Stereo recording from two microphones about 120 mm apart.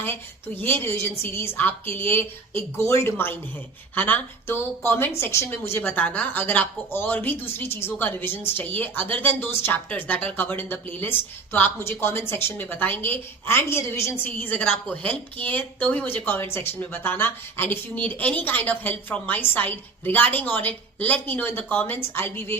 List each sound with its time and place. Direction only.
0.0 s a woman's voice: 15° left (ahead or behind)